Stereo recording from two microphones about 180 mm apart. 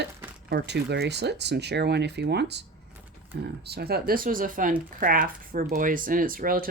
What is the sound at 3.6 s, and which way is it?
Speech, 65° right (ahead or behind).